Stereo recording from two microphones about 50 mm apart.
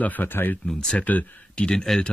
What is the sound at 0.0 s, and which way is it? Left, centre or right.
Speech, left.